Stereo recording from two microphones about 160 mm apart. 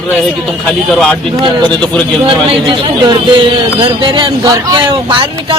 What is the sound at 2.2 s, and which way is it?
A man's voice, 30° right (ahead or behind).